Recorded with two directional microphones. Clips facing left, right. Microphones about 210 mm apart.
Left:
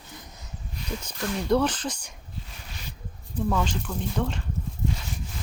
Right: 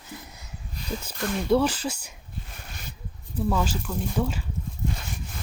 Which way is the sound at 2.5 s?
50° right (ahead or behind).